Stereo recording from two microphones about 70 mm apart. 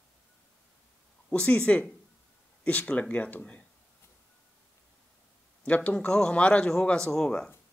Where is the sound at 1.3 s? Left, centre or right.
Centre.